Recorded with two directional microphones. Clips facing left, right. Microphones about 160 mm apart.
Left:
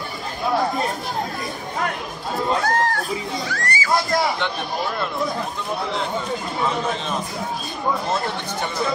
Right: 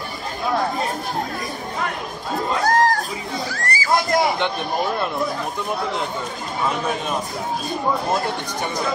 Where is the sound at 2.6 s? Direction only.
40° right (ahead or behind).